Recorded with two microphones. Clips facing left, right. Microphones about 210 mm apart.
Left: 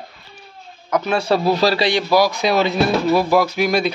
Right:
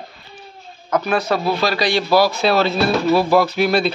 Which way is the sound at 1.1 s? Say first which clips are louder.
Left 4 dB; 30° left (ahead or behind).